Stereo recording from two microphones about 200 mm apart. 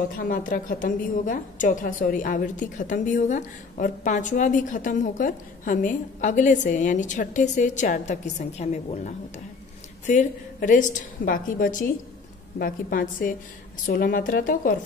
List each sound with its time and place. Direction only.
0.1 s a woman's voice: 45° left (ahead or behind)